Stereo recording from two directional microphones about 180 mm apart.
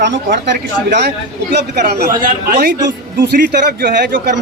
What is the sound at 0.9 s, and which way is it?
Speech, 65° right (ahead or behind).